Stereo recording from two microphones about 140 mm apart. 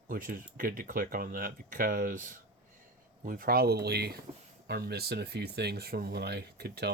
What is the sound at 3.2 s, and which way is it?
Speech, 85° right.